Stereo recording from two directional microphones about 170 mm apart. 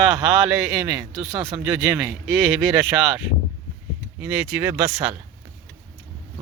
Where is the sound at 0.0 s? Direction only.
5° right (ahead or behind).